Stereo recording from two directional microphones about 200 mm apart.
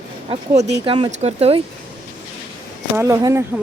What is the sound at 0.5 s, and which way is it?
Speech, 60° right (ahead or behind).